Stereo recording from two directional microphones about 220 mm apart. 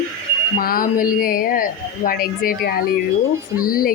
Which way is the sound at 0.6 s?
40° left (ahead or behind).